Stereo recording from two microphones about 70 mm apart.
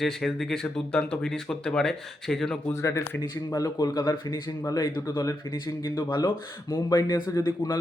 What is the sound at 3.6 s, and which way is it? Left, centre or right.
Speech, left.